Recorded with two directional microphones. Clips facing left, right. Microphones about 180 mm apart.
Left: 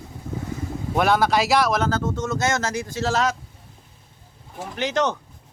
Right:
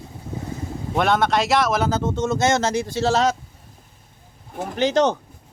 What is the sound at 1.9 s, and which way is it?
Speech, 20° right (ahead or behind).